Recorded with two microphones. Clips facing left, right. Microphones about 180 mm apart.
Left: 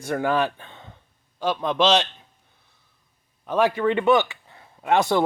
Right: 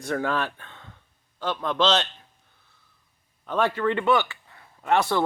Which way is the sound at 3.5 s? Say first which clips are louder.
Left 3 dB; 10° left (ahead or behind).